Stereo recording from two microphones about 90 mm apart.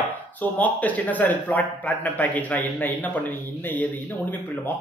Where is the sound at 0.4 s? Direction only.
15° left (ahead or behind).